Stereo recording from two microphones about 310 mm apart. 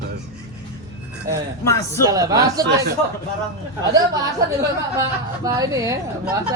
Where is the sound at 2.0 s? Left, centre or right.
Centre.